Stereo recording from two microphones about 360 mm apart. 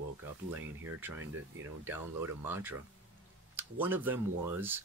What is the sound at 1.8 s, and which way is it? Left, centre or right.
Speech, centre.